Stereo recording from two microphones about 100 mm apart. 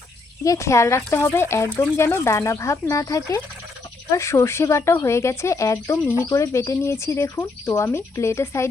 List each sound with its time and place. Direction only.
0.4 s speech: 30° left (ahead or behind)